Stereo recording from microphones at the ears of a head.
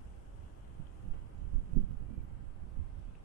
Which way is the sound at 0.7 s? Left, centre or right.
Right.